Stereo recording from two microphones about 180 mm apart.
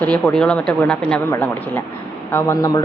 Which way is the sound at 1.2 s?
15° left (ahead or behind).